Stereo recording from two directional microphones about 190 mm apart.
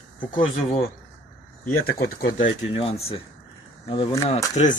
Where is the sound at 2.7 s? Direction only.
30° left (ahead or behind).